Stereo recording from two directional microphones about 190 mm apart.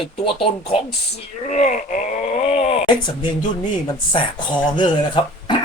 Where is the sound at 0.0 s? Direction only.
30° left (ahead or behind).